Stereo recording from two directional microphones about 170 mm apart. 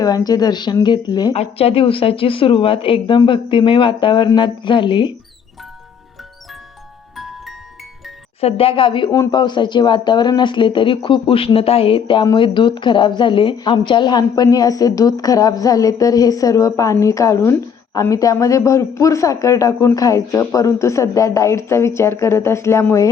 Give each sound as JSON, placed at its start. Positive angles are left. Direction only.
{"t": 0.0, "sound": "speech", "side_deg": 20}
{"t": 1.3, "sound": "a woman's voice", "side_deg": 35}
{"t": 7.2, "sound": "music", "side_deg": 0}
{"t": 8.4, "sound": "a woman's voice", "side_deg": 35}